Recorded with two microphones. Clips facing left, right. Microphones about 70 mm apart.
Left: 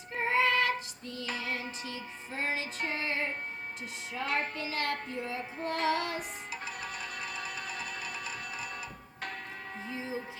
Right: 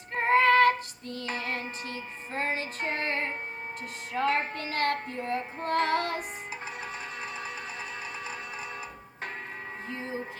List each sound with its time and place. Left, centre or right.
0.1 s female singing: right
1.3 s music: right
6.8 s music: right
9.9 s music: right